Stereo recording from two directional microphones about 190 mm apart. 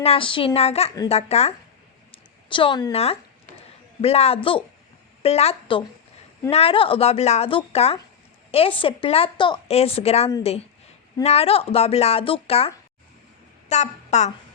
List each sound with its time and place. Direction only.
0.0 s a woman's voice: 30° left (ahead or behind)